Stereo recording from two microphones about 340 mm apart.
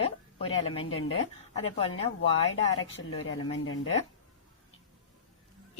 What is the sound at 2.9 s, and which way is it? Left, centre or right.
Speech, left.